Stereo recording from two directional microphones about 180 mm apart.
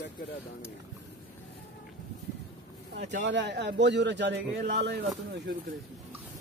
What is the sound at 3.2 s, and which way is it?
A man's voice, 75° right (ahead or behind).